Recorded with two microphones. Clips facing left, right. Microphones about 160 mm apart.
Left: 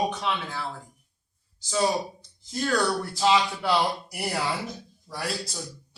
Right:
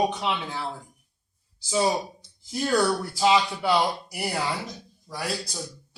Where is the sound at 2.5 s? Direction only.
15° right (ahead or behind).